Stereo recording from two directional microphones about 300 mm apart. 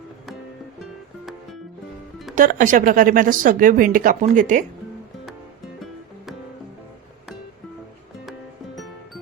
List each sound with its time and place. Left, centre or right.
2.3 s speech: right
8.3 s music: centre